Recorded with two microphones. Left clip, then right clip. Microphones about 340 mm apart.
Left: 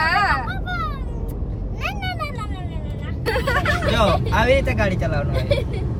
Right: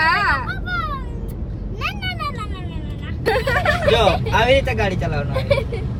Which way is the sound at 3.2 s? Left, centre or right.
Centre.